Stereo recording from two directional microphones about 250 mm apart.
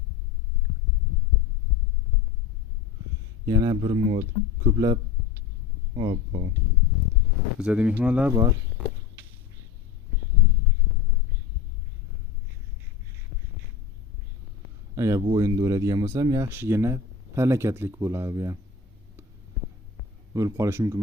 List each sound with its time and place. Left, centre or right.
3.4 s speech: centre
7.6 s speech: centre
14.9 s speech: centre
20.3 s speech: centre